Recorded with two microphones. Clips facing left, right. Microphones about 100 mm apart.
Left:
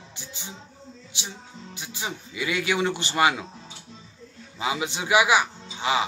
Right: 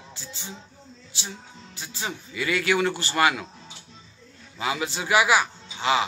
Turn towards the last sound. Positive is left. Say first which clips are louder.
# right 1 dB
turn(degrees=15)  # may be behind; listen again after turning